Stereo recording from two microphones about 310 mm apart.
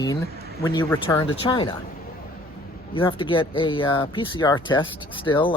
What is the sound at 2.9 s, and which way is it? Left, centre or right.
Speech, centre.